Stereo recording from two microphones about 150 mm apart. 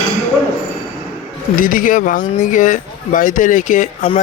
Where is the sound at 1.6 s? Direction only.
65° left (ahead or behind).